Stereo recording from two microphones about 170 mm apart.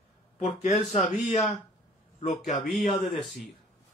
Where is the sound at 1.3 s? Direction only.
40° left (ahead or behind).